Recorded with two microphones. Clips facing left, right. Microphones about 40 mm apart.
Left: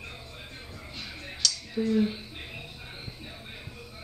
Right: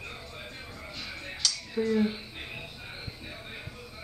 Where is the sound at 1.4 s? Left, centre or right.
Centre.